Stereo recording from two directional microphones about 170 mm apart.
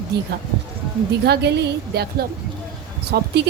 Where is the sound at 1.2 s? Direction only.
80° right.